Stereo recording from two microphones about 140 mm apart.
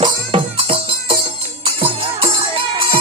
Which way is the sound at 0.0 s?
40° right (ahead or behind).